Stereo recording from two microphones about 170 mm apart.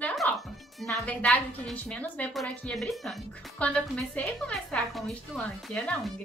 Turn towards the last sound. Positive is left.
turn(degrees=5)  # may be behind; listen again after turning